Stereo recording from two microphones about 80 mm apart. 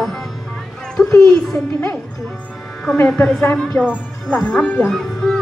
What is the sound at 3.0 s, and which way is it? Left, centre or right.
A woman's voice, centre.